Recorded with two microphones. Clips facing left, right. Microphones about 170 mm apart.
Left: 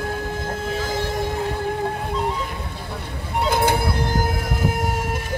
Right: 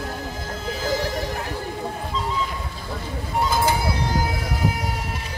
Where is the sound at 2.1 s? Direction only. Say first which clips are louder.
Left 2 dB; 60° left (ahead or behind).